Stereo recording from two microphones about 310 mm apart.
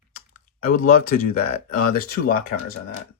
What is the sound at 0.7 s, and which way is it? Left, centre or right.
Speech, left.